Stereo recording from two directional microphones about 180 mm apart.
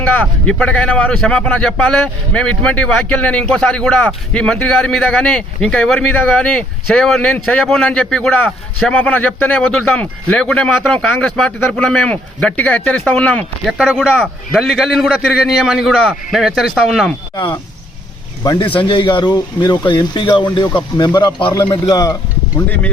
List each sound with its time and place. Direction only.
0.0 s a man's voice: 10° left (ahead or behind)
18.8 s a man's voice: 25° left (ahead or behind)